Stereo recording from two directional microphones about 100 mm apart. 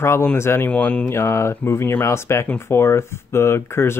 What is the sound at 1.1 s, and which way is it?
Speech, 30° left (ahead or behind).